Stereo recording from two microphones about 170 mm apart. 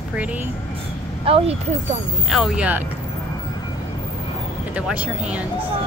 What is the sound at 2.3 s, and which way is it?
Speech, 5° right (ahead or behind).